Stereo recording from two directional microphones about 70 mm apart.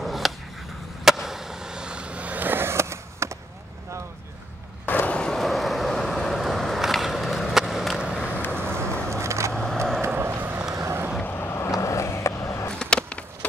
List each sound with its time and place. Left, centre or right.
0.0 s a sound: centre
1.0 s vehicle: centre; by 3.3 s right
4.8 s vehicle: left
5.1 s vehicle: centre
8.7 s a sound: right
9.5 s vehicle: centre
10.0 s vehicle: right
11.2 s vehicle: left
11.8 s vehicle: left
12.6 s skateboard: centre